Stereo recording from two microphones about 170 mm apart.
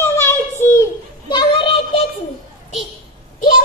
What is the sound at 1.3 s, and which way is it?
Child singing, 30° left (ahead or behind).